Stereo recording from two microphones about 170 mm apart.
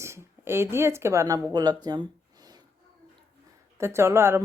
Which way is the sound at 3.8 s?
15° right (ahead or behind).